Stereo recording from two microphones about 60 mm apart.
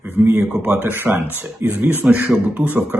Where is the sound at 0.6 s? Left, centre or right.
Right.